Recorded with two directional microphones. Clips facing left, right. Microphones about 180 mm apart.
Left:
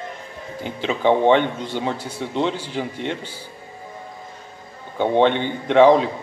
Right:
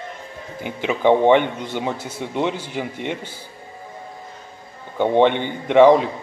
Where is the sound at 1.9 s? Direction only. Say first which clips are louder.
Even; 15° left (ahead or behind).